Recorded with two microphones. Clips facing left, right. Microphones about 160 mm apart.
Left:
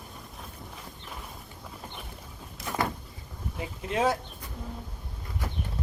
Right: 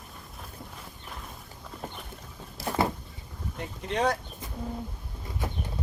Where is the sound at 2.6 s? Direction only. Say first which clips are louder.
Right 4 dB; 30° right (ahead or behind).